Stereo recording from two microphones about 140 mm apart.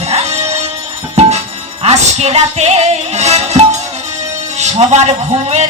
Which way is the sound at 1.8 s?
50° right (ahead or behind).